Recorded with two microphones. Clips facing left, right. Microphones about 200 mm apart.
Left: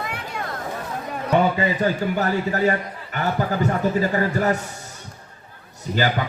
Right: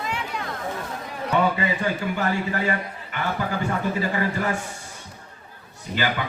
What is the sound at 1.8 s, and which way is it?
A man's voice, 40° left (ahead or behind).